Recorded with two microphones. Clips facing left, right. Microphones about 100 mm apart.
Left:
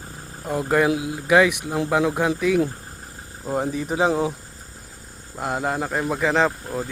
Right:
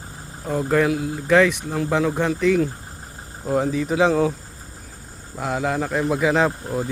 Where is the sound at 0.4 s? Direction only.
5° left (ahead or behind).